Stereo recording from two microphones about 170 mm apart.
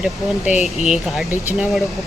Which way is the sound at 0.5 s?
40° left (ahead or behind).